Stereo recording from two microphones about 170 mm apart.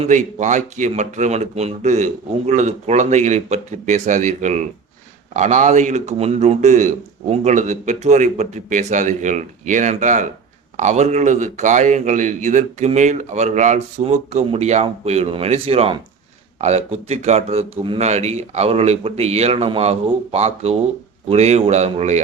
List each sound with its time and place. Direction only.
0.0 s a man's voice: 45° right (ahead or behind)